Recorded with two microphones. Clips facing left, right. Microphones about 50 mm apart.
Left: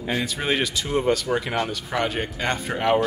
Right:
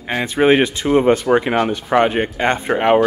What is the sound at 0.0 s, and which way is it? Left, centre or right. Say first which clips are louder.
Speech: right 10 dB; right.